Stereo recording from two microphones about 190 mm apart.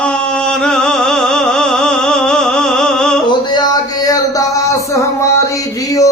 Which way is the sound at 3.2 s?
20° left (ahead or behind).